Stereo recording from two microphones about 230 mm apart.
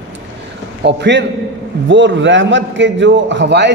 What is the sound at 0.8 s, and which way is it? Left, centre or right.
A man's voice, right.